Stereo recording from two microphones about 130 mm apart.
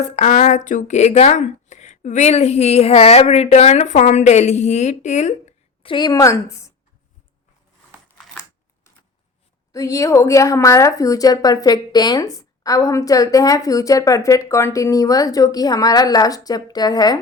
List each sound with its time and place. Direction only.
0.2 s speech: 80° left; by 5.5 s 60° left (ahead or behind)
5.8 s a woman's voice: 35° left (ahead or behind)
9.7 s a woman's voice: 25° left (ahead or behind)